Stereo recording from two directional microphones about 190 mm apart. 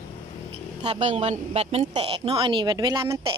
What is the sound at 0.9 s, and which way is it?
A woman's voice, 35° right (ahead or behind).